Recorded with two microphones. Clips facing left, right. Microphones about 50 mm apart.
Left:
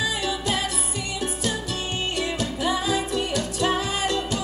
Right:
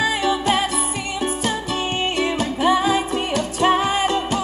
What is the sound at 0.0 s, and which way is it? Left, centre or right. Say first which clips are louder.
Music: right 7 dB; right.